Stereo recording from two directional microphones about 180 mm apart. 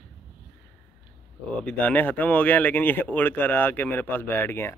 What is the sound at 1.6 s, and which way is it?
Speech, 5° left (ahead or behind).